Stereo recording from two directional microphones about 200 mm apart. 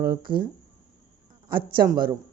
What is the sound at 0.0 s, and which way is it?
Speech, 50° right (ahead or behind).